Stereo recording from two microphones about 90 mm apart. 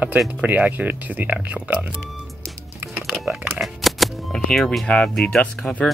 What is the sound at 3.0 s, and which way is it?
Speech, 5° right (ahead or behind).